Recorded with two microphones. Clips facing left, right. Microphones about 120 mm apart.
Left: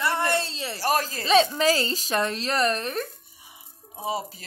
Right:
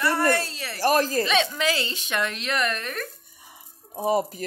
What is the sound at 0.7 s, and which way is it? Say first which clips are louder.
Speech: right 5 dB; 45° right (ahead or behind).